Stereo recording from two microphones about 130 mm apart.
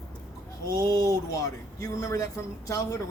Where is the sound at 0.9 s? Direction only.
25° left (ahead or behind).